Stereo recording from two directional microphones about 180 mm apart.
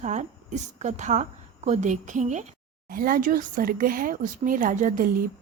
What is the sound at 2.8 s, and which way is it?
Speech, 50° right (ahead or behind).